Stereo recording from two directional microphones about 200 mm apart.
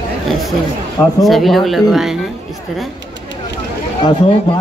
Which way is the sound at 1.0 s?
Centre (ahead or behind).